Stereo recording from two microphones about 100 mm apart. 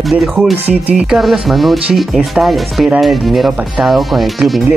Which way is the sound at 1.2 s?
Centre (ahead or behind).